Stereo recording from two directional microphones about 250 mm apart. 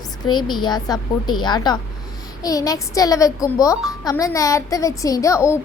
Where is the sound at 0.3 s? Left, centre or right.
Centre.